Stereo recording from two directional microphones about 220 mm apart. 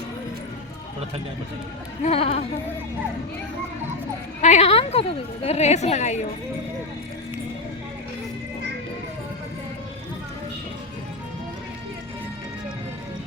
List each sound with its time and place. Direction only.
2.0 s a woman's voice: 25° left (ahead or behind)
4.4 s a woman's voice: 30° left (ahead or behind)